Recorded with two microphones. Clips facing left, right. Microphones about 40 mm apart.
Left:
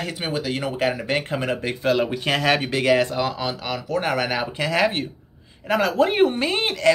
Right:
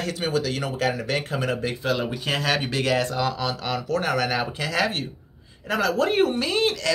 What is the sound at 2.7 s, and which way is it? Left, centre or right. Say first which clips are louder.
Speech: left 4 dB; left.